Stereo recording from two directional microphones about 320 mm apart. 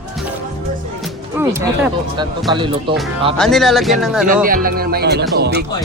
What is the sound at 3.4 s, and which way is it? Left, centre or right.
Speech, centre.